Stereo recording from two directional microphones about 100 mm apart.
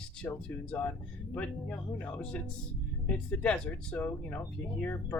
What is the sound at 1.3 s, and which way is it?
Speech, 15° left (ahead or behind).